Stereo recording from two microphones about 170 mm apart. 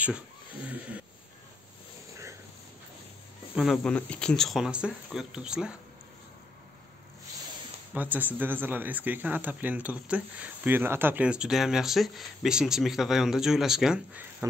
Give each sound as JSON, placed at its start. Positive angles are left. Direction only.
{"t": 0.7, "sound": "speech", "side_deg": -10}
{"t": 3.5, "sound": "speech", "side_deg": 0}
{"t": 7.9, "sound": "speech", "side_deg": -10}
{"t": 14.4, "sound": "speech", "side_deg": -15}